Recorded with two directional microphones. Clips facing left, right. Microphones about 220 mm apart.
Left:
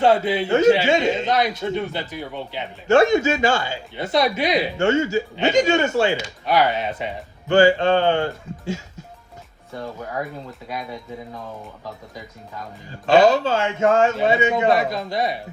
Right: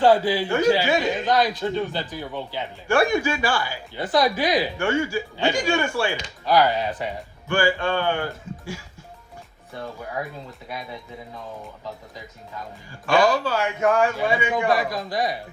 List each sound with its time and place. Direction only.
0.0 s a man's voice: 25° left (ahead or behind)
12.9 s a man's voice: 25° left (ahead or behind)